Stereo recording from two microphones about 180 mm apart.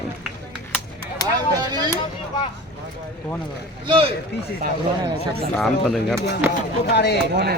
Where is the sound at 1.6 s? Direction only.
20° right (ahead or behind).